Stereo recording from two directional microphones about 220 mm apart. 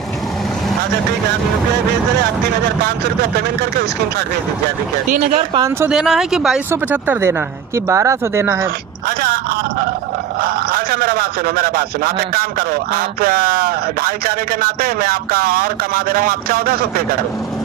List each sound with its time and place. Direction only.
2.8 s a man's voice: 45° right (ahead or behind)
5.2 s speech: 30° right (ahead or behind)
5.5 s speech: 15° right (ahead or behind)
5.9 s speech: centre (ahead or behind)
9.0 s a sound: 40° right (ahead or behind)
10.4 s a man's voice: 40° right (ahead or behind)